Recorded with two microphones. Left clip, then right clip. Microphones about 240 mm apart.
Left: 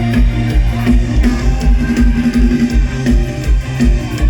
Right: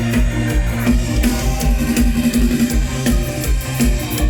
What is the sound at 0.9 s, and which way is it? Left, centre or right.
Music, right.